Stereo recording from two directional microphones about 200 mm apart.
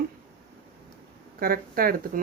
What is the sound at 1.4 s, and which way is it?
Speech, 45° right (ahead or behind).